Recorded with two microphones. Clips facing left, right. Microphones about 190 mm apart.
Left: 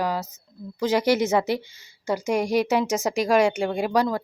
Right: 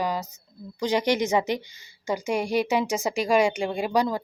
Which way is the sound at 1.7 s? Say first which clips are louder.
Left 2 dB; 10° right (ahead or behind).